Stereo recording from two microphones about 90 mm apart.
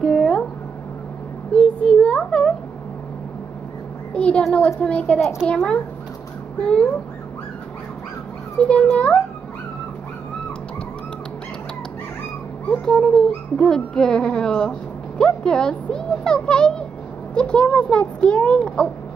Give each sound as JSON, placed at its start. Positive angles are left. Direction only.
{"t": 0.0, "sound": "a sound", "side_deg": 10}
{"t": 1.5, "sound": "a sound", "side_deg": 10}
{"t": 4.1, "sound": "a child's voice", "side_deg": 10}
{"t": 4.8, "sound": "speech", "side_deg": 10}
{"t": 6.6, "sound": "speech", "side_deg": 10}
{"t": 8.6, "sound": "speech", "side_deg": 15}
{"t": 12.6, "sound": "speech", "side_deg": 10}